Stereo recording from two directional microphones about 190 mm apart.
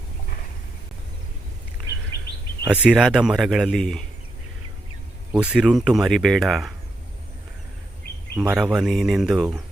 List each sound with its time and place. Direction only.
2.6 s speech: 5° right (ahead or behind)
5.3 s speech: 5° right (ahead or behind)
8.4 s speech: 5° right (ahead or behind)